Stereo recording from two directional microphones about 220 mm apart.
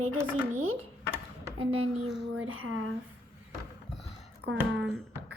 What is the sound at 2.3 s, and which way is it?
Speech, 70° right (ahead or behind).